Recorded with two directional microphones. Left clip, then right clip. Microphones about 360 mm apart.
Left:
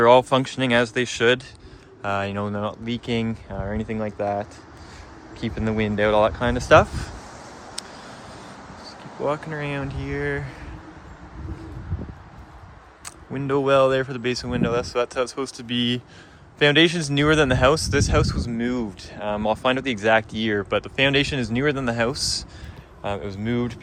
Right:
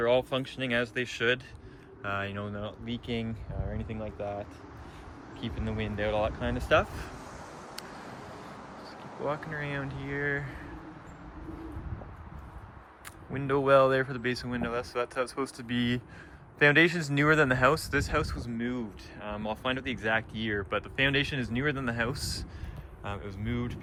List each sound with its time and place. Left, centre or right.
0.0 s speech: centre
5.4 s speech: centre
9.2 s speech: centre
13.3 s speech: centre